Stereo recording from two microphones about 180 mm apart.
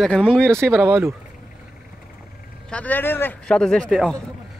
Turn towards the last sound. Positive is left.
turn(degrees=5)  # may be behind; listen again after turning